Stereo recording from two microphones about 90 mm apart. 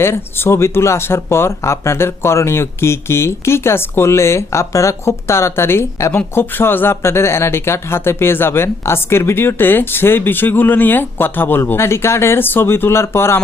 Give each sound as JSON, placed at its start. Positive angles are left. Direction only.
{"t": 0.0, "sound": "speech", "side_deg": 25}